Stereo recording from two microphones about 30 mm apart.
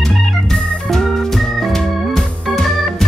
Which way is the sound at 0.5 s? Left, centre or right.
Centre.